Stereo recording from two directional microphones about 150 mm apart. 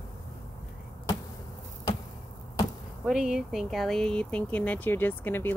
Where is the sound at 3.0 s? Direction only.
5° right (ahead or behind).